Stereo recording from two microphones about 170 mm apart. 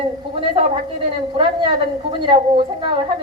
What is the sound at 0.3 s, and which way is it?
A woman's voice, 30° right (ahead or behind).